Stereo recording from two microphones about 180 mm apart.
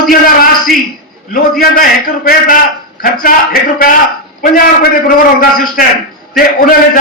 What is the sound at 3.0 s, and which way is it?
A man's voice, 55° left (ahead or behind).